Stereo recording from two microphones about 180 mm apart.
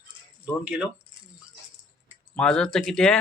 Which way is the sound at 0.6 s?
5° right (ahead or behind).